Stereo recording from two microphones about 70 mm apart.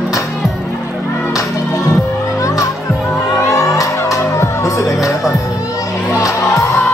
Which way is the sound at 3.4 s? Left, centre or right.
Left.